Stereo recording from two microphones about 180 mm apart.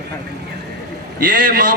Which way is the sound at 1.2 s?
50° right (ahead or behind).